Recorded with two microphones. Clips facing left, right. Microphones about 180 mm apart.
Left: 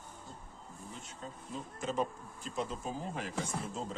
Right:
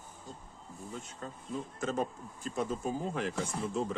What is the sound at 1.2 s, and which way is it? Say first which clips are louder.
Speech: right 3 dB; 50° right (ahead or behind).